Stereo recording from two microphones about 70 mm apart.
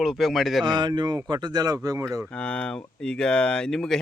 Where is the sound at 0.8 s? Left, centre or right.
Right.